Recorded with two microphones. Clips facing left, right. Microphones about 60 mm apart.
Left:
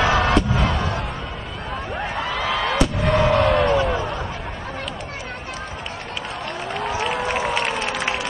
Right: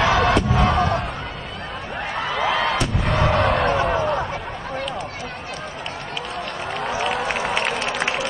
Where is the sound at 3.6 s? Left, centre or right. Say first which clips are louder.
Even; right.